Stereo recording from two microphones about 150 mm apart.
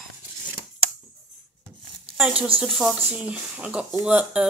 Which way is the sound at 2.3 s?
40° right (ahead or behind).